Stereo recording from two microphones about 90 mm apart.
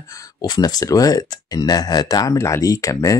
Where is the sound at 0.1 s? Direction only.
45° left (ahead or behind).